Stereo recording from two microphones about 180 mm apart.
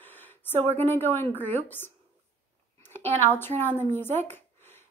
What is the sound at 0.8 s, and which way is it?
A woman's voice, 10° left (ahead or behind).